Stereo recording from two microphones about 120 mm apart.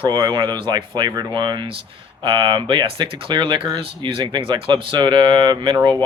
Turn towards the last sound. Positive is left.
turn(degrees=-40)  # may be behind; listen again after turning